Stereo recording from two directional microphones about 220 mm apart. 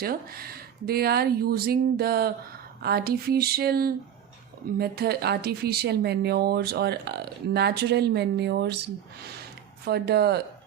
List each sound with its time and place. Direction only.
0.0 s speech: 45° right (ahead or behind)